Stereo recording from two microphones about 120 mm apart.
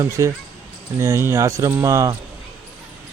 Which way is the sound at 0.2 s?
30° right (ahead or behind).